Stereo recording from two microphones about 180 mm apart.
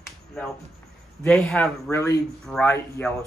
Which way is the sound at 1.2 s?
5° left (ahead or behind).